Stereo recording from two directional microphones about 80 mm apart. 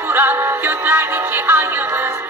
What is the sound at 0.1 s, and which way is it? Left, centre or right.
Music, right.